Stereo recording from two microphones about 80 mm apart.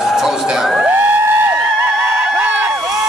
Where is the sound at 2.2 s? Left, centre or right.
Centre.